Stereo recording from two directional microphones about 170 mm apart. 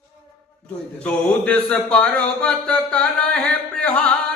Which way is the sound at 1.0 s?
5° left (ahead or behind).